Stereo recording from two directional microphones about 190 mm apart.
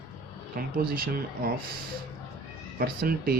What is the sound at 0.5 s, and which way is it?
Speech, 50° right (ahead or behind).